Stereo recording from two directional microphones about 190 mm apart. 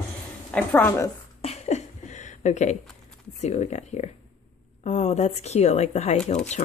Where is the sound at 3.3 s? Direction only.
35° left (ahead or behind).